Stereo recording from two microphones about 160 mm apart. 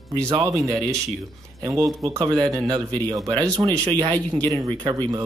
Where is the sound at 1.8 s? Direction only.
Centre (ahead or behind).